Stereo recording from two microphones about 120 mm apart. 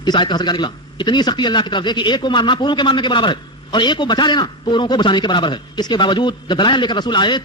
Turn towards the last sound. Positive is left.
turn(degrees=40)  # may be behind; listen again after turning